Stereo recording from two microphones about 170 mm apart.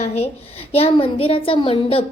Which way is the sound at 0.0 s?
40° left (ahead or behind).